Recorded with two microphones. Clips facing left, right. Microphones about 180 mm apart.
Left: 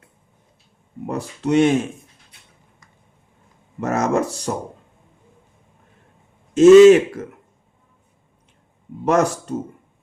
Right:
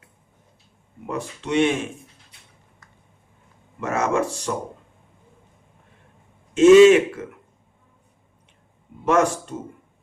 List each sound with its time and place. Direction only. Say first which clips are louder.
1.0 s speech: left 5 dB; 40° left (ahead or behind)
3.8 s speech: left 3 dB; 40° left (ahead or behind)
6.5 s speech: left 3 dB; 40° left (ahead or behind)
9.0 s speech: left 1 dB; 40° left (ahead or behind)